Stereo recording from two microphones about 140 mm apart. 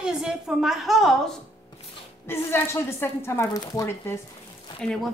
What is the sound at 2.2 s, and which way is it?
A woman's voice, 15° left (ahead or behind).